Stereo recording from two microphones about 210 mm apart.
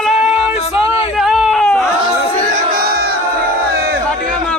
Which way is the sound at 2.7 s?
45° right (ahead or behind).